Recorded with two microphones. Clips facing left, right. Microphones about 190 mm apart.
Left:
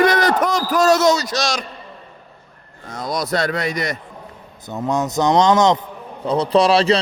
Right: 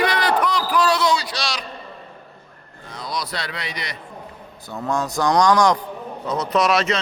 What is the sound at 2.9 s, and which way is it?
A man's voice, 45° left (ahead or behind).